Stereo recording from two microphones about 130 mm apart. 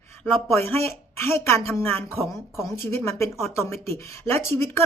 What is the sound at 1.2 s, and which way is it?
Speech, 20° left (ahead or behind).